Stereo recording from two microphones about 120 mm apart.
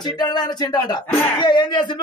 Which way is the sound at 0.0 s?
35° left (ahead or behind).